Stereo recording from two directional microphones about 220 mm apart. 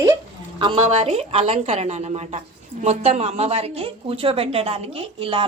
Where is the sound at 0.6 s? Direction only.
25° right (ahead or behind).